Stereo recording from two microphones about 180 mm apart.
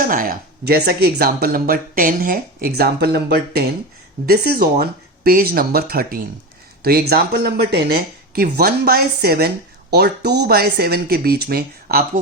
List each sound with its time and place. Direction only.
0.0 s speech: 50° right (ahead or behind)